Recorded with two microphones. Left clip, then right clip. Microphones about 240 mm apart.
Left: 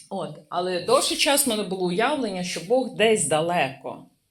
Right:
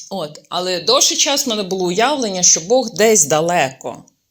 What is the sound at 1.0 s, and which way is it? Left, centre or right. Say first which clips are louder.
Speech: right 6 dB; right.